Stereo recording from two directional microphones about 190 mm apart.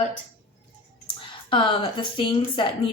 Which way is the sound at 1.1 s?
25° left (ahead or behind).